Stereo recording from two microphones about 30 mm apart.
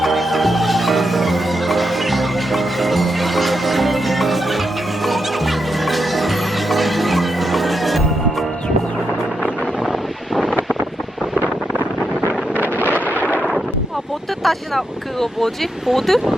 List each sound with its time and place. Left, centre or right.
0.0 s music: centre
12.5 s wind noise: right
13.1 s artillery fire: left
14.4 s vehicle: centre
16.0 s speech: centre